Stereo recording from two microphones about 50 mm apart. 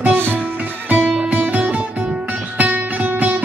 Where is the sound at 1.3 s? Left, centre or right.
Right.